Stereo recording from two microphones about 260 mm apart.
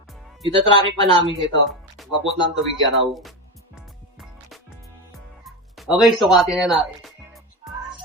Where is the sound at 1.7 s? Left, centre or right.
Centre.